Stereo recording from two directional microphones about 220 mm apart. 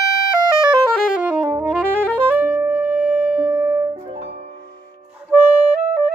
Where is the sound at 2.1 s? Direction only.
5° right (ahead or behind).